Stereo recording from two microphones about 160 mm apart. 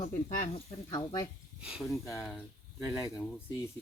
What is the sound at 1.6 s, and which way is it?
Speech, 5° right (ahead or behind).